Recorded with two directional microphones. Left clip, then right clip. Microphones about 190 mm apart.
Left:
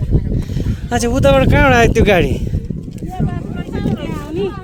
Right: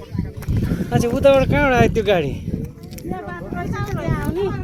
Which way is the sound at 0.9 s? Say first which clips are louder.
Left 1 dB; 45° left (ahead or behind).